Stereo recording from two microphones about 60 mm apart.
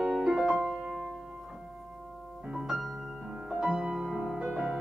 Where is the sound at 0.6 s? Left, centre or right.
Centre.